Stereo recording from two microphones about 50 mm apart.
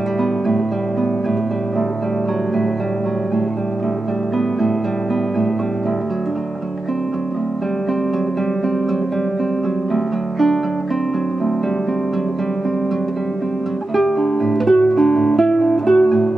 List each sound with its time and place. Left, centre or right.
9.9 s music: centre
13.9 s music: centre